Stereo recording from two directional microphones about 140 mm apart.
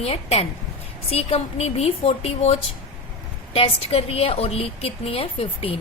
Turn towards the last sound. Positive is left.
turn(degrees=45)  # may be behind; listen again after turning